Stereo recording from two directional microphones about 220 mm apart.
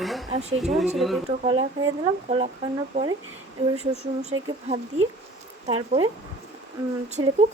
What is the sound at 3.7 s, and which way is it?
Speech, 30° right (ahead or behind).